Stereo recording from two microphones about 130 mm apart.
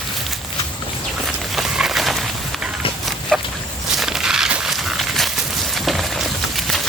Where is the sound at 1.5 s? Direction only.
Centre (ahead or behind).